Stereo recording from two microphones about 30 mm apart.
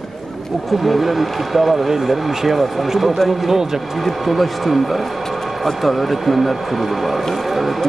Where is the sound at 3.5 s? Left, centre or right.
Centre.